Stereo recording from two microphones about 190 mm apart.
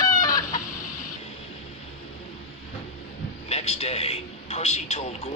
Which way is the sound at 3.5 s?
35° left (ahead or behind).